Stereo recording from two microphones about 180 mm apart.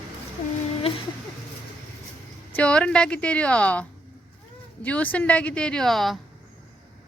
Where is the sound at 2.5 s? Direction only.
5° left (ahead or behind).